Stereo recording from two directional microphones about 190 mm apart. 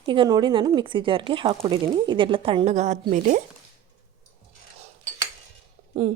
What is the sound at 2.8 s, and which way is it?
Speech, 40° right (ahead or behind).